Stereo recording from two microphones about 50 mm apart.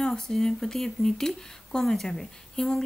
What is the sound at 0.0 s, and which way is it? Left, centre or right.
Speech, centre.